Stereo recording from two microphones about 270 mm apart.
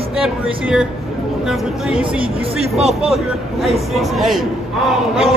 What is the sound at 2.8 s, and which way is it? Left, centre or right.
Speech, right.